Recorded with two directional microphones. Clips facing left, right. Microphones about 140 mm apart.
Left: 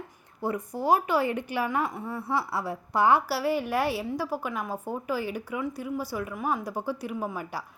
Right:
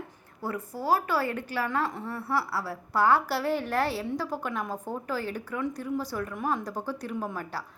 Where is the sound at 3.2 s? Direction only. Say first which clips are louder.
Left 1 dB; 5° left (ahead or behind).